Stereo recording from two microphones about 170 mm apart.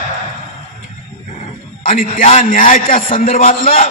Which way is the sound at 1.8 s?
50° left (ahead or behind).